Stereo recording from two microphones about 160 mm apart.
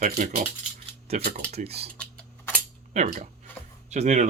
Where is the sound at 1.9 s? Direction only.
5° left (ahead or behind).